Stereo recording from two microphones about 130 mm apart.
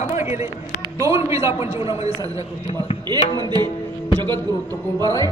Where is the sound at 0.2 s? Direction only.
20° right (ahead or behind).